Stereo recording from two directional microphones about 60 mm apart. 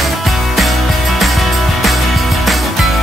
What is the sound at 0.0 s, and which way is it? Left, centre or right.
Music, centre.